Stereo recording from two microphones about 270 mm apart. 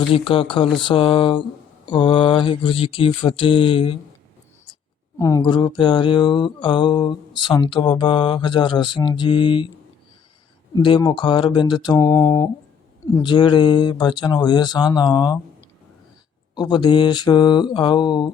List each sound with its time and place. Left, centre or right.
0.1 s mantra: centre
5.2 s speech: centre
10.8 s speech: centre
16.6 s speech: centre